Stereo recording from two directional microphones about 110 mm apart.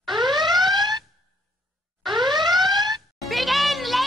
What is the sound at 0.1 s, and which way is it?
Alarm, 45° right (ahead or behind).